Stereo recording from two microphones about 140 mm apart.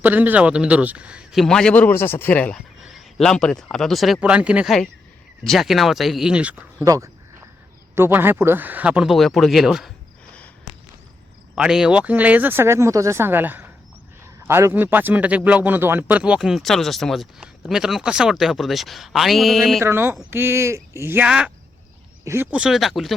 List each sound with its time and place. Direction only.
0.0 s speech: 15° right (ahead or behind)
6.8 s a sound: 25° right (ahead or behind)
7.9 s speech: 15° right (ahead or behind)
11.5 s speech: 5° right (ahead or behind)
19.8 s speech: 15° right (ahead or behind)
22.2 s speech: 20° right (ahead or behind)
22.5 s speech: 5° right (ahead or behind)